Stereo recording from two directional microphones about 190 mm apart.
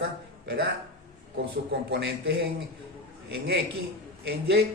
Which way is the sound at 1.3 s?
60° right (ahead or behind).